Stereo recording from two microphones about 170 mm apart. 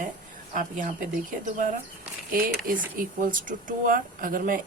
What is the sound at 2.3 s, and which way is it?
A woman's voice, 60° right (ahead or behind).